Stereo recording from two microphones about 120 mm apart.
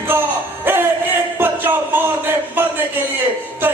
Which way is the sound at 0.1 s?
20° right (ahead or behind).